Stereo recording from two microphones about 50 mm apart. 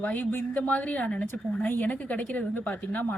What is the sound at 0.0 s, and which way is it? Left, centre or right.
Speech, left.